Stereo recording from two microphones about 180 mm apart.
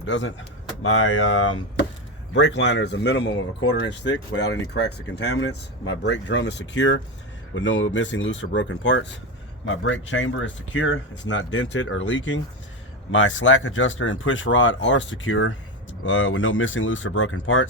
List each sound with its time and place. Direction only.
0.0 s speech: 90° left